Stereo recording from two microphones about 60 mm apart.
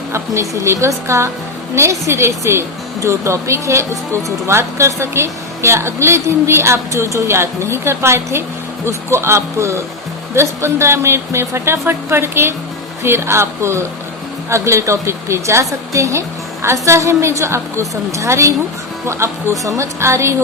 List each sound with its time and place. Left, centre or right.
0.1 s speech: right